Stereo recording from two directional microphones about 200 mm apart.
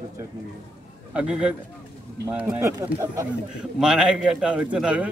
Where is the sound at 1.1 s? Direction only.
5° right (ahead or behind).